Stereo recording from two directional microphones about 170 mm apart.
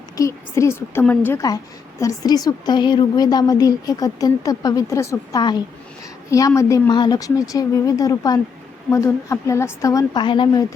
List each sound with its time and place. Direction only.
0.2 s a woman's voice: 15° left (ahead or behind)